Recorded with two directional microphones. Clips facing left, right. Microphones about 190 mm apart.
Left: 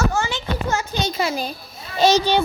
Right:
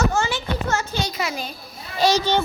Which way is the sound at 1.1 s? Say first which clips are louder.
Left 4 dB; 30° left (ahead or behind).